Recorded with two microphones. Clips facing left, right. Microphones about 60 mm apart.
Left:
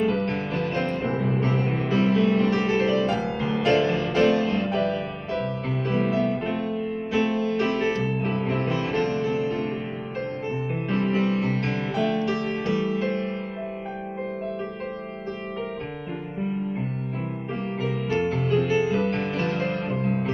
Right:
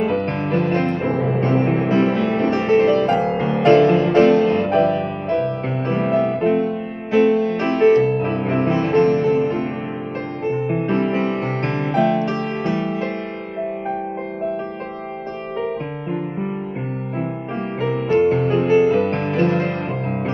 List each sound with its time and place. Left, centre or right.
0.0 s music: right
4.9 s music: right
5.9 s music: right
6.1 s music: right
8.2 s music: right
8.5 s music: right
18.1 s music: right